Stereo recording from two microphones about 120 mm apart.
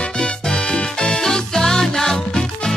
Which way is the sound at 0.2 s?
10° left (ahead or behind).